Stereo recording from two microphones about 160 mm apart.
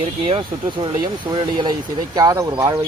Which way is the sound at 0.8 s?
25° right (ahead or behind).